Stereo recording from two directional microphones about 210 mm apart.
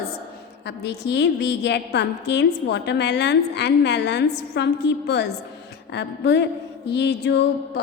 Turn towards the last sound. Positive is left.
turn(degrees=55)  # may be behind; listen again after turning